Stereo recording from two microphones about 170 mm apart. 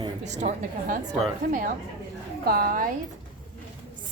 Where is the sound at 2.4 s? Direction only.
60° right (ahead or behind).